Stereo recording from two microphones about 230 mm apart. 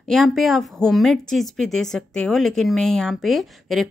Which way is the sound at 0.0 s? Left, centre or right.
Centre.